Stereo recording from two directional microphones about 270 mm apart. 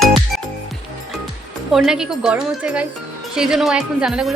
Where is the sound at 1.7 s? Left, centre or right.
Centre.